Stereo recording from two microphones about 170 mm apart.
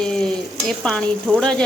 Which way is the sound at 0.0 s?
5° left (ahead or behind).